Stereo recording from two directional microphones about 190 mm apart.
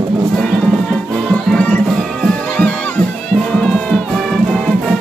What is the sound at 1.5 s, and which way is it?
Music, 5° left (ahead or behind).